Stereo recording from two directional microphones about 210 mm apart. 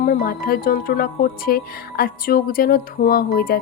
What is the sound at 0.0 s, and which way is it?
Speech, 45° left (ahead or behind).